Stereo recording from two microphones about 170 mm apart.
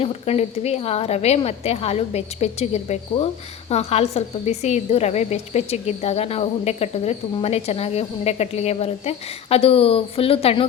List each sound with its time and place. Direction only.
0.0 s a woman's voice: 35° left (ahead or behind)